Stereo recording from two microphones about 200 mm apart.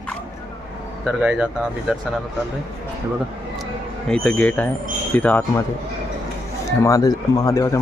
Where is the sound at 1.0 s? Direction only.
5° right (ahead or behind).